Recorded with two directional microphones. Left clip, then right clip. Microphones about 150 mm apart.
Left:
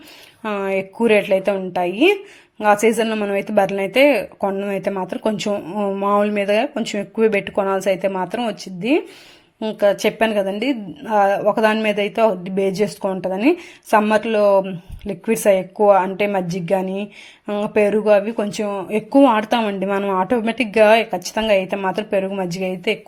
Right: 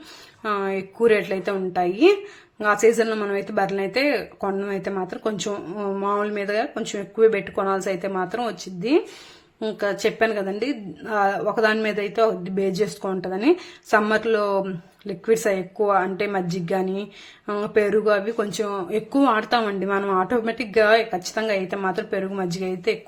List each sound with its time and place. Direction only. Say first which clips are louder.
0.4 s a woman's voice: left 3 dB; 25° left (ahead or behind)
9.9 s a woman's voice: left 4 dB; 30° left (ahead or behind)